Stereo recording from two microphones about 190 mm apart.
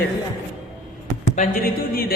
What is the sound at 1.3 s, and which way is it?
Speech, 45° left (ahead or behind).